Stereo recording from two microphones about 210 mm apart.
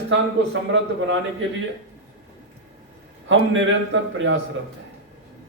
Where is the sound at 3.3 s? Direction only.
65° right (ahead or behind).